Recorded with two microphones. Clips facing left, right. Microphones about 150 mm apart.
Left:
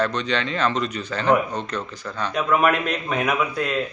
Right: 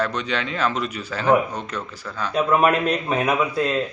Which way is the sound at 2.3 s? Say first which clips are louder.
Right 2 dB; 30° right (ahead or behind).